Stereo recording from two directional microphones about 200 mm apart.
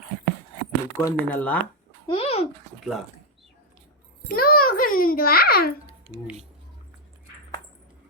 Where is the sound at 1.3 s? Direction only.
10° left (ahead or behind).